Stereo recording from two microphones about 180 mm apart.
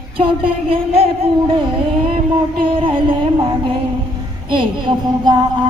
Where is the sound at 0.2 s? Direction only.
30° right (ahead or behind).